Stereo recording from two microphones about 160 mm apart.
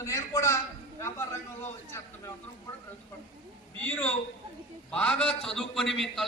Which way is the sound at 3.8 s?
10° left (ahead or behind).